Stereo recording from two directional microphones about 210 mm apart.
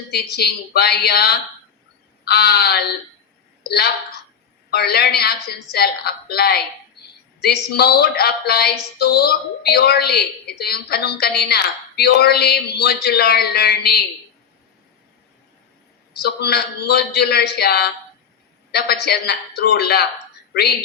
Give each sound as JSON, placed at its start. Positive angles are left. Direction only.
{"t": 0.1, "sound": "a woman's voice", "side_deg": 50}
{"t": 16.1, "sound": "a woman's voice", "side_deg": 50}